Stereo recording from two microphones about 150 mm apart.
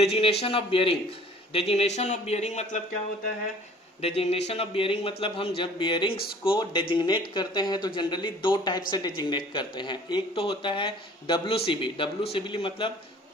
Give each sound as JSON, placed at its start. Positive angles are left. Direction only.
{"t": 0.0, "sound": "speech", "side_deg": 45}
{"t": 4.0, "sound": "speech", "side_deg": 40}